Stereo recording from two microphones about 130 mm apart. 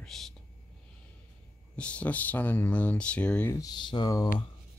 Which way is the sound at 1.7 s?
10° left (ahead or behind).